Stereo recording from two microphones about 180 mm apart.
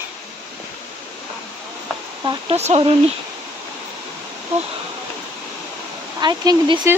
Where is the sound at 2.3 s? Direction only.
35° right (ahead or behind).